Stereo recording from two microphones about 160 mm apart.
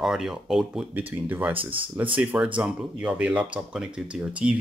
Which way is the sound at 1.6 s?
35° right (ahead or behind).